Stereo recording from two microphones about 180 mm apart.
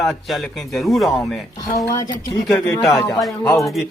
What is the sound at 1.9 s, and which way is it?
A man's voice, 20° left (ahead or behind).